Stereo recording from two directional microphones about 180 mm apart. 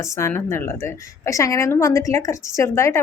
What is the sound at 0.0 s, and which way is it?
Speech, 15° left (ahead or behind).